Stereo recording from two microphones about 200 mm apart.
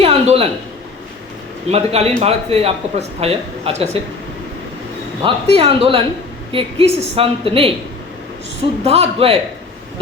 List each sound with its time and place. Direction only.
0.0 s a sound: 30° right (ahead or behind)
1.7 s speech: 30° right (ahead or behind)
5.2 s a woman's voice: 30° right (ahead or behind)
8.8 s speech: 30° right (ahead or behind)